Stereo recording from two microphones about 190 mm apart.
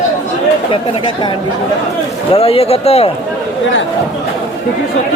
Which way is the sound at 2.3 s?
30° left (ahead or behind).